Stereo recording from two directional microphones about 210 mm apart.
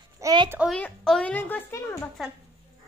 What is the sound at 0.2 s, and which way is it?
Speech, 15° right (ahead or behind).